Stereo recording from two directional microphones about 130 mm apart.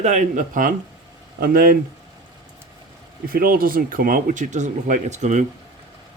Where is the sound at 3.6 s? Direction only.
90° right.